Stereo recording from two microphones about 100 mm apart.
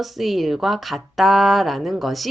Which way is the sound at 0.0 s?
Centre (ahead or behind).